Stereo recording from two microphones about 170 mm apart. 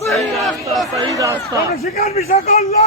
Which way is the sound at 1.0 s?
20° right (ahead or behind).